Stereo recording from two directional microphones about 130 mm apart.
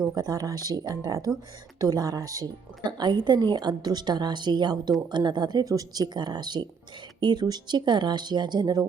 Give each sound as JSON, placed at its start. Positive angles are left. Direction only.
{"t": 0.1, "sound": "speech", "side_deg": -30}